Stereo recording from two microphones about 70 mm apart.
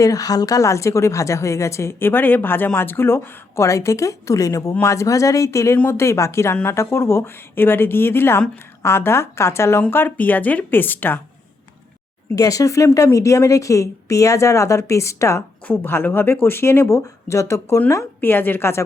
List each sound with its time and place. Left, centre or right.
0.0 s a woman's voice: left
12.4 s a woman's voice: left
15.6 s speech: left
16.9 s a woman's voice: left
17.8 s speech: left